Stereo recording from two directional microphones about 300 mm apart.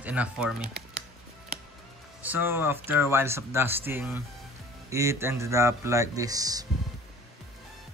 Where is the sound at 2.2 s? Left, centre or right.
Centre.